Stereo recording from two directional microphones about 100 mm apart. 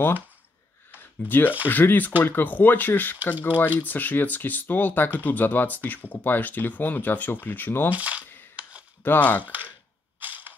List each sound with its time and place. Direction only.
0.9 s a sound: 20° left (ahead or behind)
1.7 s speech: 20° left (ahead or behind)
7.9 s speech: 15° right (ahead or behind)
9.0 s speech: 20° left (ahead or behind)
9.4 s speech: 15° right (ahead or behind)
10.2 s camera: 15° right (ahead or behind)